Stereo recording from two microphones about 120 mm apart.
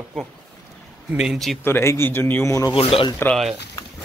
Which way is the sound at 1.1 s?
5° right (ahead or behind).